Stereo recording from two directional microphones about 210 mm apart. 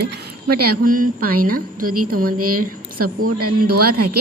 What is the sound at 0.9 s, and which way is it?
Speech, 40° right (ahead or behind).